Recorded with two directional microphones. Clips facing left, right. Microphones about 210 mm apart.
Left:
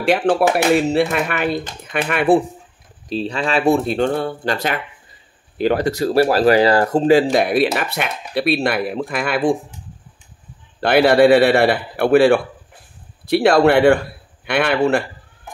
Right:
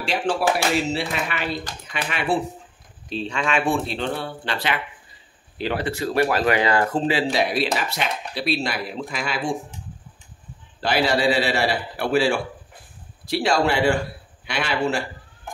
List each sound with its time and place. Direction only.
0.0 s a man's voice: 60° left (ahead or behind)
3.1 s speech: 35° left (ahead or behind); by 9.6 s 55° left (ahead or behind)
10.8 s a man's voice: 60° left (ahead or behind)